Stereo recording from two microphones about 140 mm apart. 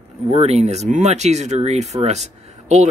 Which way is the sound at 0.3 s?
45° right (ahead or behind).